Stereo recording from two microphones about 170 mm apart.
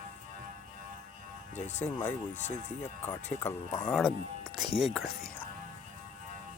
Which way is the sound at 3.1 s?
15° left (ahead or behind).